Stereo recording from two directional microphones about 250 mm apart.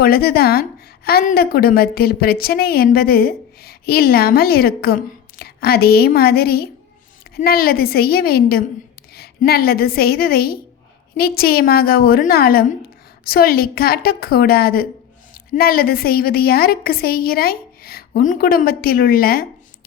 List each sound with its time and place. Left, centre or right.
0.0 s a woman's voice: left